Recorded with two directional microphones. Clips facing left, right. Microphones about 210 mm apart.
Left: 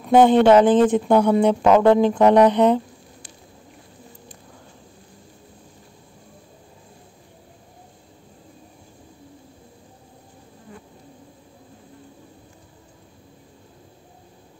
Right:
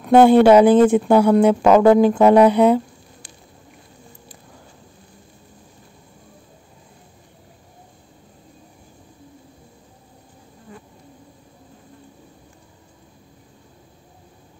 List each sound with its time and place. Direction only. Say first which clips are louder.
0.0 s speech: right 3 dB; 5° right (ahead or behind)